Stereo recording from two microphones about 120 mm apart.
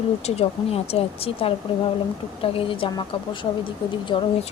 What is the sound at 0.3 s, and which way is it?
Speech, 60° left (ahead or behind).